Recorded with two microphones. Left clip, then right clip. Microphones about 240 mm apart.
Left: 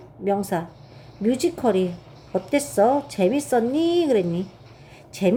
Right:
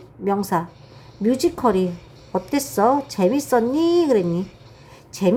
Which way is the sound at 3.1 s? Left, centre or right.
Centre.